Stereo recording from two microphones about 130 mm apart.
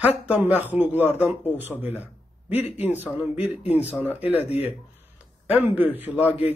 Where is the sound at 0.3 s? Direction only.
15° right (ahead or behind).